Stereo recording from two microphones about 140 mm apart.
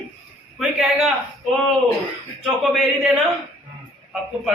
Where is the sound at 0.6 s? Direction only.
Centre (ahead or behind).